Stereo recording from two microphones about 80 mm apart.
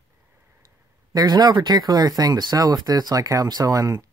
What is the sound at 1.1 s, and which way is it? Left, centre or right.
Speech, right.